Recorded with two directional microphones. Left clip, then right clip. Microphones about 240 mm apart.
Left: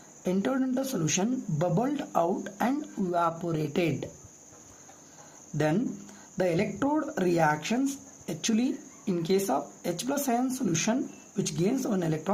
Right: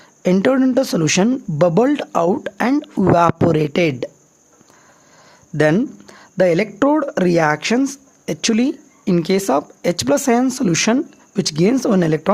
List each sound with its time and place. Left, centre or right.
0.2 s speech: right
5.5 s speech: right